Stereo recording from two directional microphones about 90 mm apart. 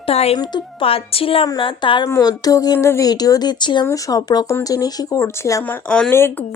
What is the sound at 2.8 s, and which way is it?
Speech, 30° left (ahead or behind).